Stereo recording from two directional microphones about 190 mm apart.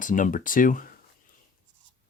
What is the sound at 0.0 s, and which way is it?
Speech, 45° left (ahead or behind).